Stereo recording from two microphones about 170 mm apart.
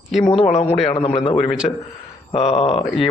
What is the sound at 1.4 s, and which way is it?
Speech, 5° right (ahead or behind).